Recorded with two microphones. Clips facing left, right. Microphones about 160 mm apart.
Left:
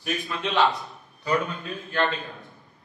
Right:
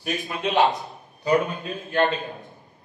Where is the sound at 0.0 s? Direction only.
35° right (ahead or behind).